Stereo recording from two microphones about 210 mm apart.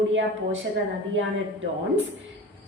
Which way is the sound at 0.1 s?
65° right (ahead or behind).